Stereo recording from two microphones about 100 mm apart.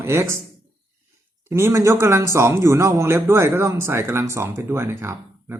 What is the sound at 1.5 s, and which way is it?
Speech, 25° right (ahead or behind).